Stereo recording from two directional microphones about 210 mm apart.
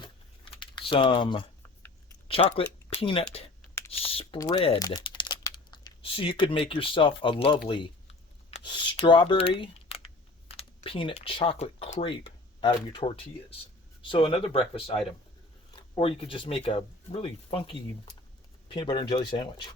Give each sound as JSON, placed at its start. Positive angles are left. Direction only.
{"t": 0.5, "sound": "typing", "side_deg": 25}
{"t": 2.2, "sound": "speech", "side_deg": 25}